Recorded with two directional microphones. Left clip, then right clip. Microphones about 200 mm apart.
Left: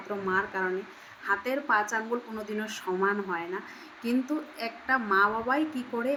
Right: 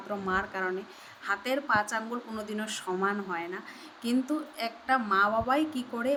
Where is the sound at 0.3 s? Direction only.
20° right (ahead or behind).